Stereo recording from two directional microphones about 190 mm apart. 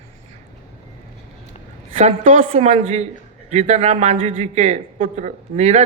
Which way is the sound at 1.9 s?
30° right (ahead or behind).